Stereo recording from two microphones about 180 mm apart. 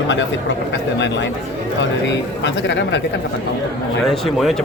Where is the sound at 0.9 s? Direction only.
80° left.